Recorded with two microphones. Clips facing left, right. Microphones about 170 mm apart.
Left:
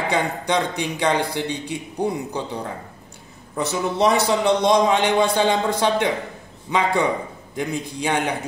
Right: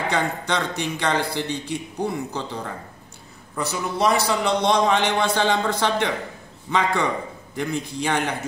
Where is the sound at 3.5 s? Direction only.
20° left (ahead or behind).